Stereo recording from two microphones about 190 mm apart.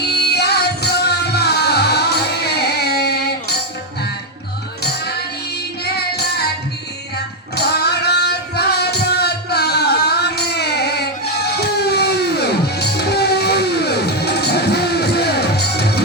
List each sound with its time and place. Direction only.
0.1 s music: 60° left (ahead or behind)
4.8 s music: 60° left (ahead or behind)
7.5 s music: 60° left (ahead or behind)